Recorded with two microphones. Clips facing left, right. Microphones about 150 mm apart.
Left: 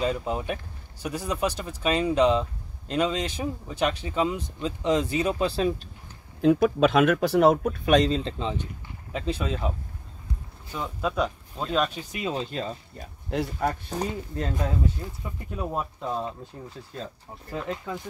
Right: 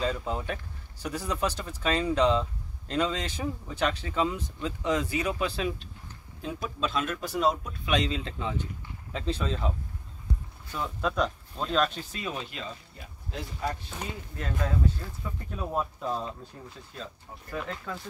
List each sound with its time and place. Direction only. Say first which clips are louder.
0.0 s speech: left 3 dB; 15° left (ahead or behind); by 5.8 s 35° left (ahead or behind)
6.4 s speech: left 13 dB; 65° left (ahead or behind); by 8.6 s 25° left (ahead or behind)
9.1 s speech: left 2 dB; 10° left (ahead or behind); by 13.1 s 40° left (ahead or behind)
13.3 s speech: left 7 dB; 65° left (ahead or behind)
13.8 s speech: left 8 dB; 35° left (ahead or behind)
15.0 s speech: left 2 dB; 15° left (ahead or behind)
17.5 s speech: left 4 dB; 20° left (ahead or behind)